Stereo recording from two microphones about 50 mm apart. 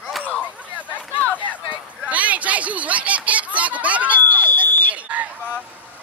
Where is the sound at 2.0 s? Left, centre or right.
Right.